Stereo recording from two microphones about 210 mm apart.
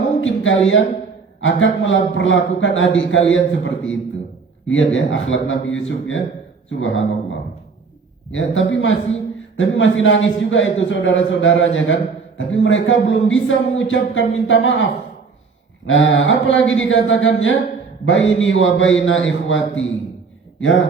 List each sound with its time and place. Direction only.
0.2 s a man's voice: 65° left (ahead or behind)
15.9 s a man's voice: 65° left (ahead or behind)